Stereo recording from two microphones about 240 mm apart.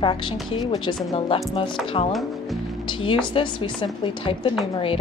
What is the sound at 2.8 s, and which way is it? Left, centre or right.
A woman's voice, centre.